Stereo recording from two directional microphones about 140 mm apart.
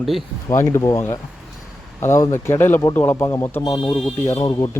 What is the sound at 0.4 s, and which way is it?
Speech, 20° left (ahead or behind).